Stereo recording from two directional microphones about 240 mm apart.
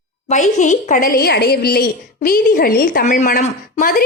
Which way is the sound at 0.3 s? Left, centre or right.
Left.